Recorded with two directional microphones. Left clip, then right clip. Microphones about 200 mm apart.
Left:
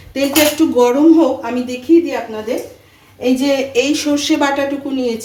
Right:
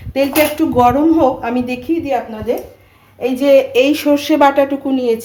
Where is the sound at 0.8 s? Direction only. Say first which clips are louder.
Even; 40° right (ahead or behind).